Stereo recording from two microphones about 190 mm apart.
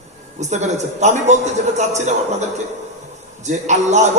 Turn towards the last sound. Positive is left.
turn(degrees=-40)  # may be behind; listen again after turning